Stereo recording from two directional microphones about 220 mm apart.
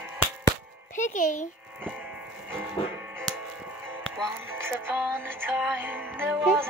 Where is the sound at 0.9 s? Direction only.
35° left (ahead or behind).